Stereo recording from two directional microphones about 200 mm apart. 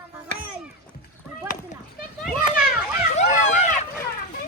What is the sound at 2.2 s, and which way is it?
Children playing, 5° right (ahead or behind).